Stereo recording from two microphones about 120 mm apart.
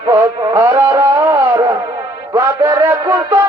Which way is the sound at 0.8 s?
20° right (ahead or behind).